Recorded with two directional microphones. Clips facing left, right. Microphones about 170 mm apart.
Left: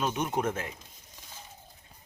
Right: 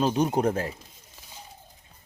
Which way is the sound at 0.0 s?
35° right (ahead or behind).